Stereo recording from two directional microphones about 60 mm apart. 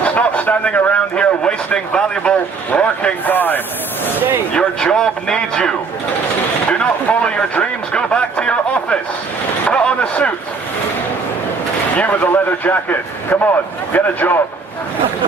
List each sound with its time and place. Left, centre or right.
0.0 s a man's voice: left
4.5 s a man's voice: centre
6.7 s a sound: centre
11.9 s a man's voice: left